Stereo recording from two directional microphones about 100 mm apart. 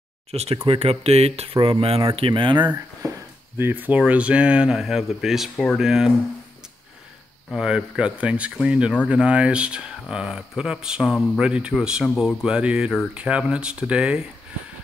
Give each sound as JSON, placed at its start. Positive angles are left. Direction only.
{"t": 0.3, "sound": "speech", "side_deg": -90}
{"t": 3.5, "sound": "speech", "side_deg": -20}
{"t": 7.5, "sound": "speech", "side_deg": -5}